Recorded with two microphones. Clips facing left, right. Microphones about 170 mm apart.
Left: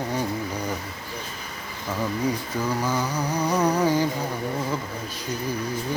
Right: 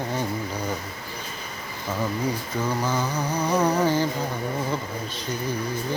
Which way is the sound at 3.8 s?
15° left (ahead or behind).